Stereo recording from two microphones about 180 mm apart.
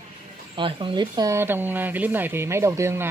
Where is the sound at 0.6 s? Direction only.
30° right (ahead or behind).